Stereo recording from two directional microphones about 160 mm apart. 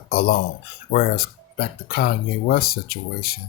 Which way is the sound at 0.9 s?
70° left (ahead or behind).